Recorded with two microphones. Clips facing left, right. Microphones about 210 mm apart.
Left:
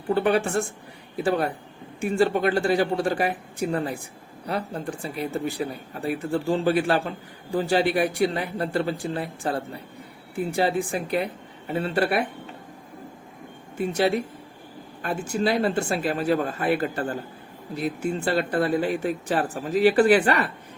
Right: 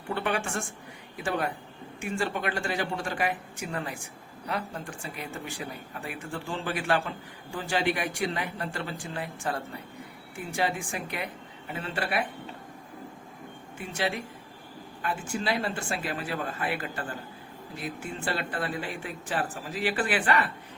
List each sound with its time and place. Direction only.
0.1 s speech: 35° left (ahead or behind)
13.7 s speech: 40° left (ahead or behind)